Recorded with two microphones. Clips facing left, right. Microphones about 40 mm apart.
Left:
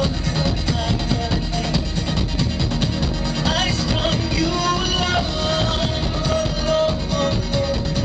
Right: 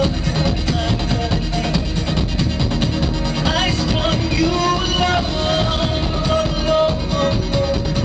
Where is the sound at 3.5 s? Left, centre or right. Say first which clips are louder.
Right 2 dB; centre.